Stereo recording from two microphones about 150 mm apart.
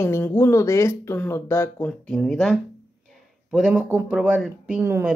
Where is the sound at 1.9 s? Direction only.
5° left (ahead or behind).